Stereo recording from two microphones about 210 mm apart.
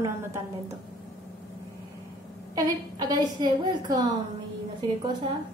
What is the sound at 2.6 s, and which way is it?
A woman's voice, 20° right (ahead or behind).